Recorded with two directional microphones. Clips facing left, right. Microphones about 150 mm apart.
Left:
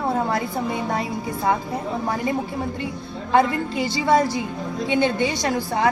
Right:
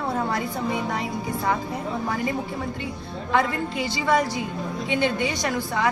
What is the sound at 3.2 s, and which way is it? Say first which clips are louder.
A woman's voice: left 4 dB; 30° left (ahead or behind).